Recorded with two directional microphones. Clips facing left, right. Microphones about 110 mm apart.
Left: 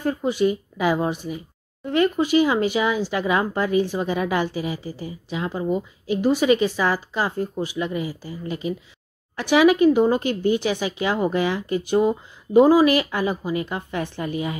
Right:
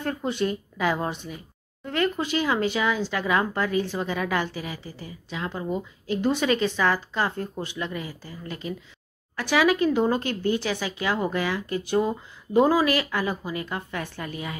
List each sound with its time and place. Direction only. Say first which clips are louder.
0.0 s speech: left 5 dB; 10° left (ahead or behind)